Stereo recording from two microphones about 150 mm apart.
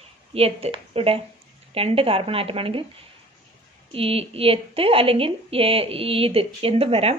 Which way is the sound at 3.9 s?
40° right (ahead or behind).